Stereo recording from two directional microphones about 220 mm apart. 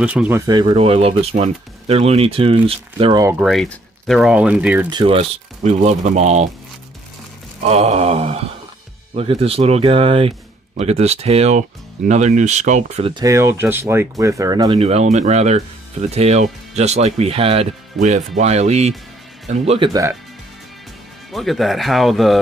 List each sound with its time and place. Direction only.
0.0 s speech: 5° right (ahead or behind)
0.5 s speech: 20° right (ahead or behind)
3.3 s speech: centre (ahead or behind)
4.8 s speech: 25° right (ahead or behind)
7.6 s speech: 30° right (ahead or behind)
19.9 s speech: 15° right (ahead or behind)
21.3 s speech: centre (ahead or behind)